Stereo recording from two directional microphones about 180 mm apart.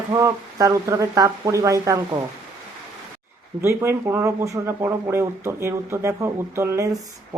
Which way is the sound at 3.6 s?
15° right (ahead or behind).